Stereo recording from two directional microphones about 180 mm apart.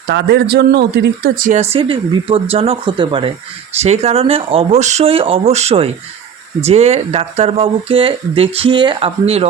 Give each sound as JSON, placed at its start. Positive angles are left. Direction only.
{"t": 0.1, "sound": "speech", "side_deg": -65}
{"t": 1.7, "sound": "speech", "side_deg": -30}